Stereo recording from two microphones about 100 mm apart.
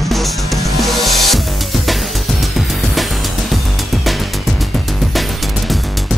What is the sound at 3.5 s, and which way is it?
Music, centre (ahead or behind).